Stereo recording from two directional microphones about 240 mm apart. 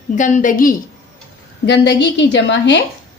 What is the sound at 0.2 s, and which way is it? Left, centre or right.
Speech, left.